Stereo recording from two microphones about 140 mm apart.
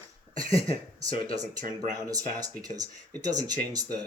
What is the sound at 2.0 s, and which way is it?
Speech, 25° right (ahead or behind).